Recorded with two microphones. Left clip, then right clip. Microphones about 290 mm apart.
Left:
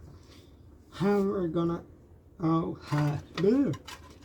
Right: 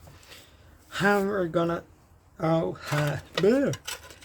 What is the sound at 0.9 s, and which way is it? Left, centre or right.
Speech, right.